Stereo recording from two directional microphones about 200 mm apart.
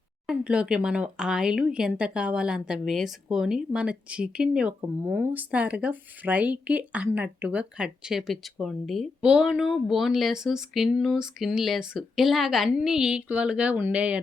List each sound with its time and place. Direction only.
0.3 s speech: 5° right (ahead or behind)